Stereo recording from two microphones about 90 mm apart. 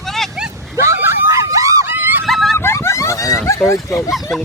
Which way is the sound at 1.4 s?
40° right (ahead or behind).